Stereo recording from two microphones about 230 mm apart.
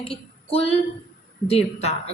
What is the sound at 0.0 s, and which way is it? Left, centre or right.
Speech, left.